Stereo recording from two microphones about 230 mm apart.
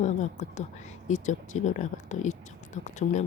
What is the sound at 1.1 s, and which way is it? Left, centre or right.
Speech, left.